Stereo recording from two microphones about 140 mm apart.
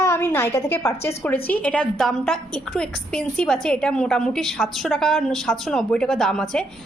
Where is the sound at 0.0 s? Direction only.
20° left (ahead or behind).